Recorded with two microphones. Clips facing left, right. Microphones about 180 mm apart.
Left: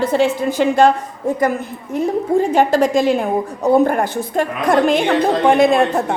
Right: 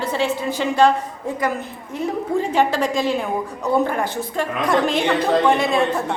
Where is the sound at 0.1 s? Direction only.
50° left (ahead or behind).